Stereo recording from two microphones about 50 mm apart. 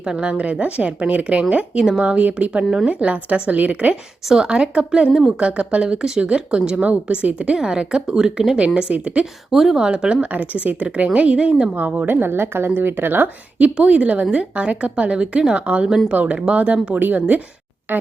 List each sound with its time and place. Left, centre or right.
0.0 s a woman's voice: centre
1.8 s speech: centre
2.0 s a woman's voice: right
2.6 s speech: centre
2.9 s a woman's voice: right
4.3 s a woman's voice: centre
8.9 s a woman's voice: right
9.5 s a woman's voice: centre; by 11.5 s right
11.9 s speech: right
13.6 s a woman's voice: right